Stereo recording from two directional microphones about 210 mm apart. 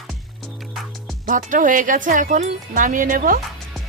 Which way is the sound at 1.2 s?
40° right (ahead or behind).